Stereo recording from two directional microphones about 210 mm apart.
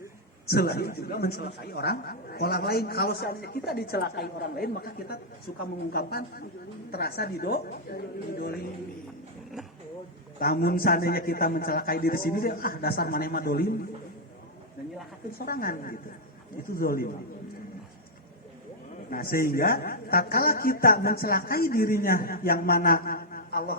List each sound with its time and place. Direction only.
0.4 s speech: 50° left (ahead or behind)
10.4 s speech: 45° left (ahead or behind)
15.4 s speech: 45° left (ahead or behind)
19.1 s speech: 45° left (ahead or behind)